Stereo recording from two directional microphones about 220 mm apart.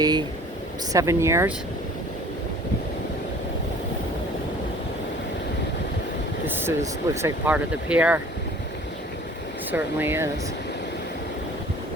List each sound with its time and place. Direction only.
0.0 s speech: 20° right (ahead or behind)
6.7 s speech: 10° right (ahead or behind)
9.7 s speech: 10° right (ahead or behind)